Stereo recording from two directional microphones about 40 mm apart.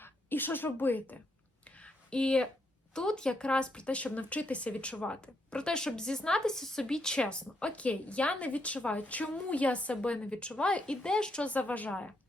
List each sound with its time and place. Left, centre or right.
0.0 s a woman's voice: left
1.8 s a sound: left
2.9 s speech: centre
7.9 s a woman's voice: left
11.5 s a woman's voice: left